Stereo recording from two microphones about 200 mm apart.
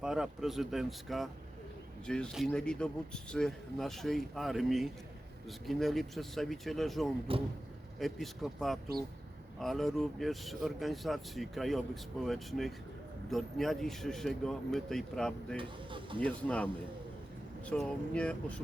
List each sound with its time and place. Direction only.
0.0 s speech: 5° right (ahead or behind)
7.3 s speech: 25° right (ahead or behind)
7.9 s speech: centre (ahead or behind)
15.5 s speech: 25° right (ahead or behind)
16.2 s speech: 5° left (ahead or behind)
17.7 s speech: 5° left (ahead or behind)